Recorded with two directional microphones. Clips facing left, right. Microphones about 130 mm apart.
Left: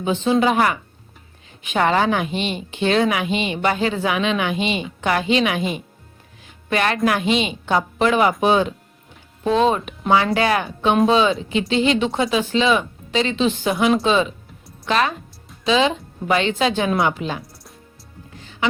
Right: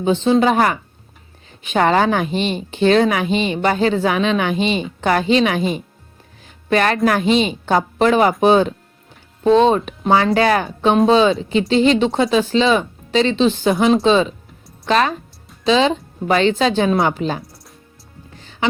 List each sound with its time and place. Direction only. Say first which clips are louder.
0.0 s a woman's voice: right 3 dB; 30° right (ahead or behind)
18.3 s music: right 2 dB; 30° right (ahead or behind)